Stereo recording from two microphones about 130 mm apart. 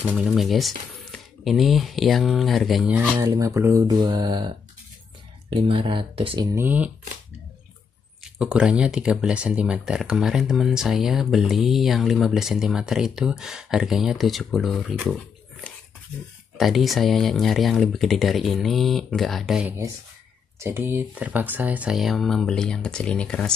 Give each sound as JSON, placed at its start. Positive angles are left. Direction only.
{"t": 0.0, "sound": "speech", "side_deg": -5}
{"t": 3.2, "sound": "speech", "side_deg": -25}
{"t": 4.0, "sound": "speech", "side_deg": -35}
{"t": 6.5, "sound": "speech", "side_deg": -15}
{"t": 8.2, "sound": "speech", "side_deg": -5}
{"t": 16.5, "sound": "speech", "side_deg": 0}
{"t": 20.5, "sound": "speech", "side_deg": -20}